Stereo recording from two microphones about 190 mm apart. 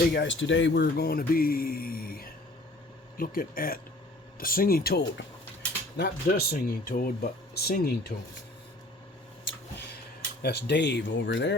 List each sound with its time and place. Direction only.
0.0 s speech: 55° left (ahead or behind)
0.3 s speech: 75° left (ahead or behind); by 8.1 s 55° left (ahead or behind)
10.4 s speech: 60° left (ahead or behind)